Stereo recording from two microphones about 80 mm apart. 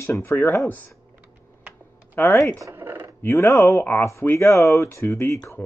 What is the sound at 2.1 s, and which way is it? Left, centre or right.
Speech, left.